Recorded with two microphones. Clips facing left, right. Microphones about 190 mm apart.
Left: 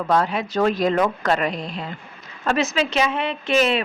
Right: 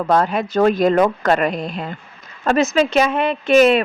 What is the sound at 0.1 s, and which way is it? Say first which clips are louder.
Speech: right 3 dB; 45° right (ahead or behind).